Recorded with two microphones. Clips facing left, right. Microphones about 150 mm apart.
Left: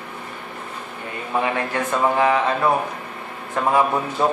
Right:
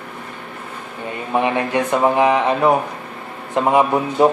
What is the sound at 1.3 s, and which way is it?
A man's voice, 20° right (ahead or behind).